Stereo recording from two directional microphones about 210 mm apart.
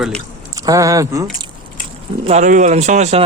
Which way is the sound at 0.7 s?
15° right (ahead or behind).